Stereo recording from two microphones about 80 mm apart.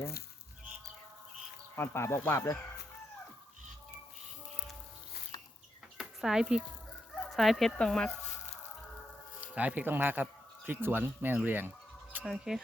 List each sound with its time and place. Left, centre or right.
1.7 s speech: left
5.3 s a sound: left
6.0 s speech: centre
7.1 s fowl: centre
7.8 s speech: centre
9.4 s speech: centre
12.2 s speech: centre